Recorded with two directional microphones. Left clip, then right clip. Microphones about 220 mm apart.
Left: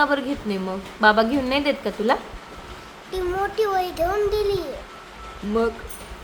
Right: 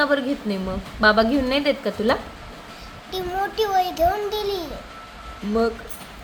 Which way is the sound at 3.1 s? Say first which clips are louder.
Left 1 dB; 15° left (ahead or behind).